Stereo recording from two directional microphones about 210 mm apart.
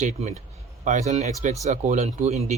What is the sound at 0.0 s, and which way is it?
Speech, 35° right (ahead or behind).